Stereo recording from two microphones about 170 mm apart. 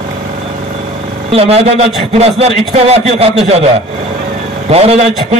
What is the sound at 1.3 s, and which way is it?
A man's voice, 35° right (ahead or behind).